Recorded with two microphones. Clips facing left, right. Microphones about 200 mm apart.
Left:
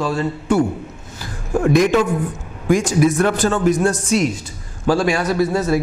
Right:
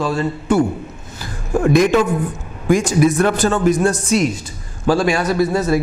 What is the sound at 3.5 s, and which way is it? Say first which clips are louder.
A man's voice: right 1 dB; 25° right (ahead or behind).